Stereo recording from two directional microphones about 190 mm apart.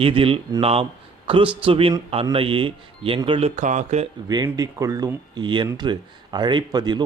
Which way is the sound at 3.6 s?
40° right (ahead or behind).